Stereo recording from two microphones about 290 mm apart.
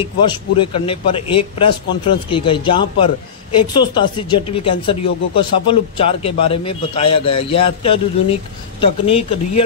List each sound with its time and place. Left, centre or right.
0.0 s speech: centre